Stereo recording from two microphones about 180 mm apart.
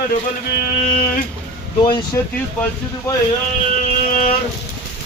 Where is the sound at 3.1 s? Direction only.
15° left (ahead or behind).